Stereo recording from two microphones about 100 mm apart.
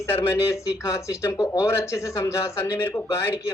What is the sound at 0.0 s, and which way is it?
Speech, 25° left (ahead or behind).